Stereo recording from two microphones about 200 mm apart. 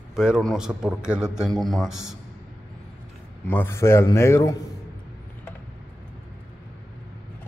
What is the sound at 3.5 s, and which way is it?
A man's voice, 10° left (ahead or behind).